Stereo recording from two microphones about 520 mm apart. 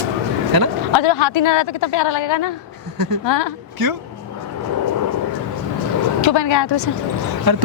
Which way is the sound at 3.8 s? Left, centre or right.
Right.